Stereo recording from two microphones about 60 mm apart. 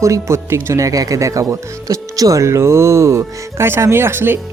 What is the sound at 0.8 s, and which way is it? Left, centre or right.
Speech, right.